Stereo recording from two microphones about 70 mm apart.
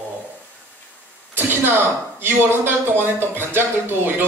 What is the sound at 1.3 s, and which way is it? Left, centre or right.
A man's voice, right.